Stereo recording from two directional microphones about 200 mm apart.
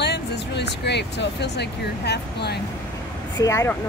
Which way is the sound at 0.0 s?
55° left (ahead or behind).